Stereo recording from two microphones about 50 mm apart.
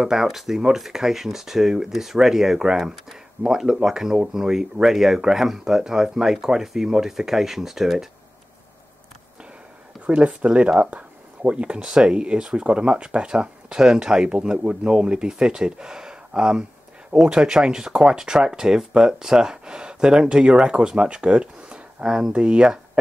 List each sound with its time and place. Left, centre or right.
0.0 s speech: centre
10.0 s speech: right